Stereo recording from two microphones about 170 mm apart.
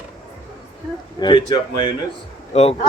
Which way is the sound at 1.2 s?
25° left (ahead or behind).